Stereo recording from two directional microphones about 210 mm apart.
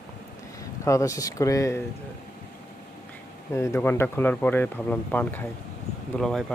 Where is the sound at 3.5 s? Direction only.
15° left (ahead or behind).